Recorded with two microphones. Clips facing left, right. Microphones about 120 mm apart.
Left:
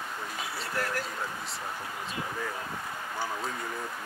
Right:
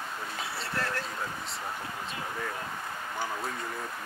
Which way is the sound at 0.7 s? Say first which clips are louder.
Left 1 dB; 25° right (ahead or behind).